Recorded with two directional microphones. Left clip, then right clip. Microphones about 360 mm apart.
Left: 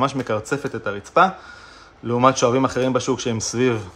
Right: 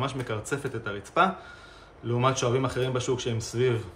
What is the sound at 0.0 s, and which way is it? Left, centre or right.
Speech, centre.